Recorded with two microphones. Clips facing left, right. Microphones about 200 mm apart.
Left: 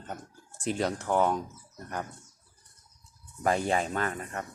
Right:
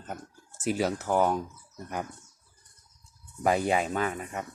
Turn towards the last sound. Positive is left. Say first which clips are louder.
# right 2 dB
turn(degrees=-5)  # may be behind; listen again after turning